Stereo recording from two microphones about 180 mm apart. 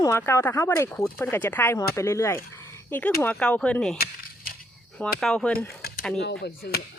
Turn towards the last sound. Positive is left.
turn(degrees=65)  # may be behind; listen again after turning